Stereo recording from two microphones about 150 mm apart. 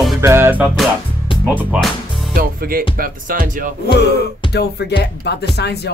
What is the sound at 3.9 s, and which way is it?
Music, 90° left.